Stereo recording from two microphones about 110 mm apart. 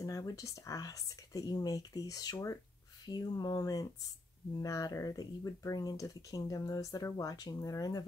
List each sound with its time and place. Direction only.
0.0 s speech: 30° left (ahead or behind)